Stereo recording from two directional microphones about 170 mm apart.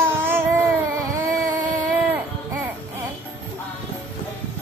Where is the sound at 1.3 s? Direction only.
20° right (ahead or behind).